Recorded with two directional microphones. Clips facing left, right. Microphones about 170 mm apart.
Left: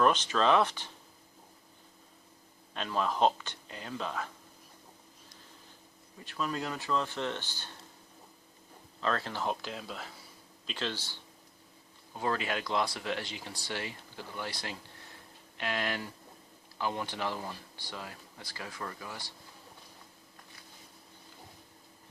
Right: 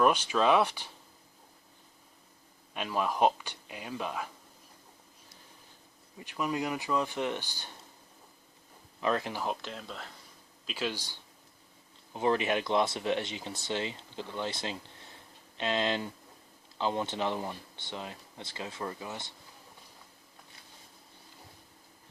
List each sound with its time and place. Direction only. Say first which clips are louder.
0.0 s speech: right 1 dB; 10° right (ahead or behind)
2.7 s speech: right 1 dB; 10° right (ahead or behind)
6.1 s speech: right 3 dB; 15° right (ahead or behind)
9.0 s speech: right 2 dB; 15° right (ahead or behind)
9.5 s speech: left 1 dB; centre (ahead or behind)
10.7 s speech: right 2 dB; 10° right (ahead or behind)